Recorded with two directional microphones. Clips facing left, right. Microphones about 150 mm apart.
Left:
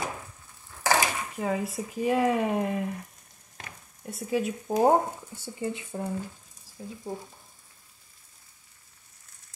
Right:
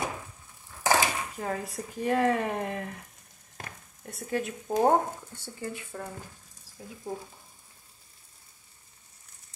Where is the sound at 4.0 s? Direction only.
5° left (ahead or behind).